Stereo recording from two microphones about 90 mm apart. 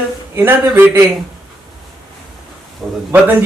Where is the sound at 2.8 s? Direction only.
Centre (ahead or behind).